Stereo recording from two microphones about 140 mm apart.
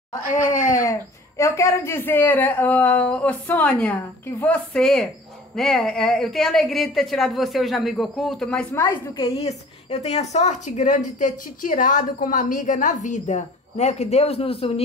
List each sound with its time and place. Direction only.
0.7 s a woman's voice: 25° left (ahead or behind); by 8.6 s 5° left (ahead or behind)
8.7 s a woman's voice: 20° left (ahead or behind)
9.4 s speech: 50° left (ahead or behind)